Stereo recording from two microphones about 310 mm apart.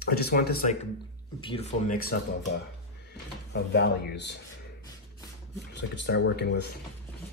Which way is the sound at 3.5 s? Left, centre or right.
Left.